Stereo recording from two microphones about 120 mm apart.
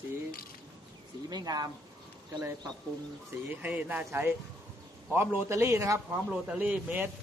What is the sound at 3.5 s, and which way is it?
A man's voice, 10° right (ahead or behind).